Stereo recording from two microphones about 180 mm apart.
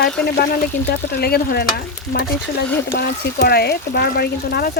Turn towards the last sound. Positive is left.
turn(degrees=60)  # may be behind; listen again after turning